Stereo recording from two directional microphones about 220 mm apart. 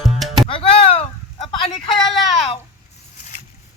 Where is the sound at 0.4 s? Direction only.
25° left (ahead or behind).